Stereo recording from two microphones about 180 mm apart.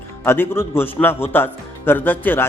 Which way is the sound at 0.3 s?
15° left (ahead or behind).